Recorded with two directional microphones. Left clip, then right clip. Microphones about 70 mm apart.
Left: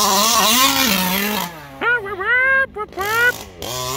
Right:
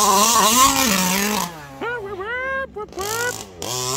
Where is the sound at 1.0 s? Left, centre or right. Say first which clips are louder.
Left 1 dB; centre.